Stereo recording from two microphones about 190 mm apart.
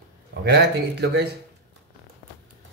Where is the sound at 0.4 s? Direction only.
60° right (ahead or behind).